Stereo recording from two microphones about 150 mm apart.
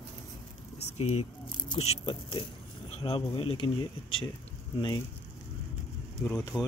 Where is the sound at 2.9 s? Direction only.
40° left (ahead or behind).